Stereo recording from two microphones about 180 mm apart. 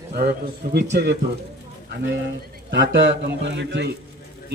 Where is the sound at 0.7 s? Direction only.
65° right (ahead or behind).